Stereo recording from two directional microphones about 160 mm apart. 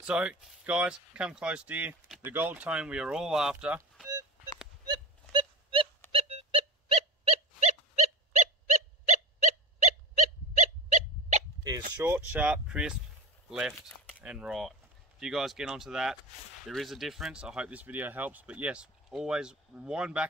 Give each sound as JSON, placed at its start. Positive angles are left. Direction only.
{"t": 0.0, "sound": "speech", "side_deg": -5}
{"t": 4.8, "sound": "a sound", "side_deg": -30}
{"t": 6.1, "sound": "dog", "side_deg": -40}
{"t": 10.6, "sound": "wild animals", "side_deg": -50}
{"t": 12.0, "sound": "speech", "side_deg": -10}